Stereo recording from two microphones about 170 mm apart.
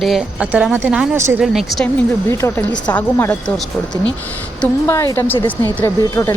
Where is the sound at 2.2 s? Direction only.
15° left (ahead or behind).